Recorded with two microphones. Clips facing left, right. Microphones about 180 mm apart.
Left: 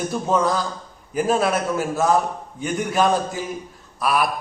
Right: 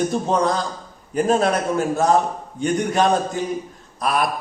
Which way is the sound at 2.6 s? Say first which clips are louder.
Right 2 dB; 5° left (ahead or behind).